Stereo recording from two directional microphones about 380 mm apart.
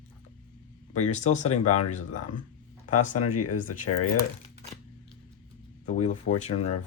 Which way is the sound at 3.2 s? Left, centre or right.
Left.